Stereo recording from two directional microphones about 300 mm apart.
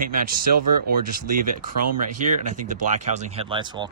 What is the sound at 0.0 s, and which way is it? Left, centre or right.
Speech, right.